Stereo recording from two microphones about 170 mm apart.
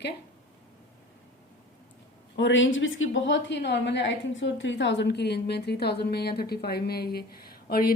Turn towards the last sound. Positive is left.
turn(degrees=65)  # may be behind; listen again after turning